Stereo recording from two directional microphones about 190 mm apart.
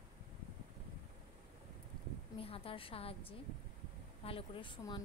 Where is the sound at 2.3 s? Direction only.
30° left (ahead or behind).